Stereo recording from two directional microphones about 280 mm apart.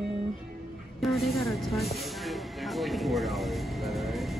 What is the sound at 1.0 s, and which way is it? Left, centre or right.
Speech, centre.